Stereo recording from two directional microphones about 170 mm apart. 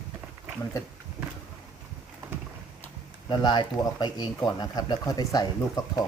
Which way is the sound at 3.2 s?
25° left (ahead or behind).